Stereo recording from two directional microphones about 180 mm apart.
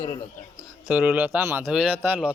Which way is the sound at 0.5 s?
5° right (ahead or behind).